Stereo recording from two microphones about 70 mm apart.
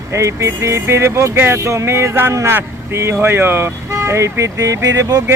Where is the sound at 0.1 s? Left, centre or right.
Right.